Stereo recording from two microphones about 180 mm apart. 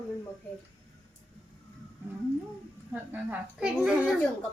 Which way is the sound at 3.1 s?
5° right (ahead or behind).